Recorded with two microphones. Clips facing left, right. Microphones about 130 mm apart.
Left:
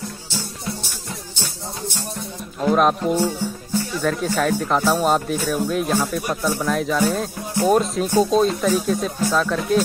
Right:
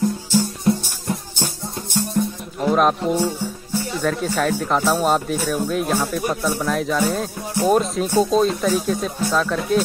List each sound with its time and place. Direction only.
0.3 s music: 50° right (ahead or behind)
2.6 s speech: centre (ahead or behind)